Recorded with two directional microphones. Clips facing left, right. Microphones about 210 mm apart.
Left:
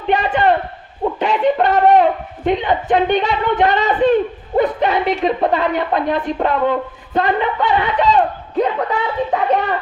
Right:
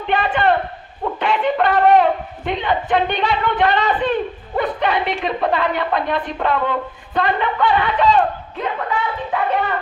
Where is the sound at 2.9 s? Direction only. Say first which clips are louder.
Left 5 dB; 45° left (ahead or behind).